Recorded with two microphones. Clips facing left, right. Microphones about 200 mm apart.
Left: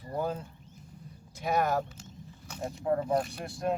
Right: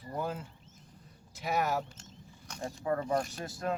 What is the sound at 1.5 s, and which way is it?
Speech, 5° right (ahead or behind).